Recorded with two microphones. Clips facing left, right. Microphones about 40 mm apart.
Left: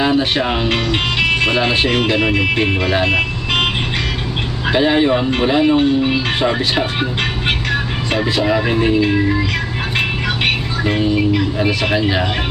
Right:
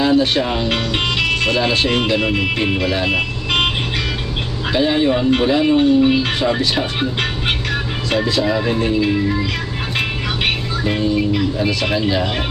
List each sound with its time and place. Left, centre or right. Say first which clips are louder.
0.0 s speech: even; left
0.7 s speech: left 1 dB; centre
1.3 s speech: left 2 dB; left
3.1 s vehicle: left 2 dB; centre
4.7 s speech: left 2 dB; left
7.4 s vehicle: left 2 dB; centre
8.2 s speech: left 3 dB; left
10.8 s speech: left 2 dB; left